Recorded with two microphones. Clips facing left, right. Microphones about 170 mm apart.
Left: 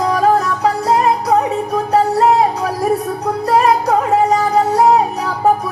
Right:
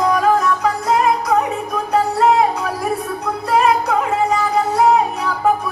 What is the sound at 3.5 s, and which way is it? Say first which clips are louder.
Music: left 2 dB; 40° left (ahead or behind).